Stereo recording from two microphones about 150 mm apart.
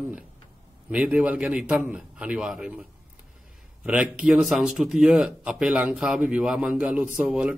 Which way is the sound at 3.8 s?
5° right (ahead or behind).